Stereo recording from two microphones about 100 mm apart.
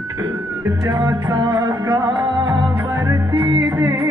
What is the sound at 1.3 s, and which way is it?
Music, 50° right (ahead or behind).